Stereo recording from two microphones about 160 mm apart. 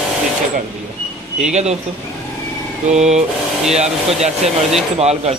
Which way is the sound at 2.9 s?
45° right (ahead or behind).